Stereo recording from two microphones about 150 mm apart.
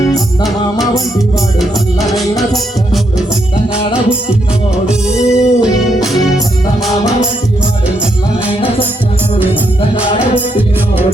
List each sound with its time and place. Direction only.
1.5 s music: centre (ahead or behind)
4.9 s music: 5° right (ahead or behind)
10.3 s music: 10° right (ahead or behind)